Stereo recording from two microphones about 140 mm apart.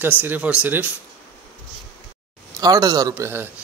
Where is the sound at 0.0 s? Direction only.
15° right (ahead or behind).